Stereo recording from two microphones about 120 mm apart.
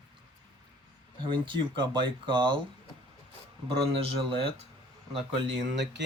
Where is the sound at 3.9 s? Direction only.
50° right (ahead or behind).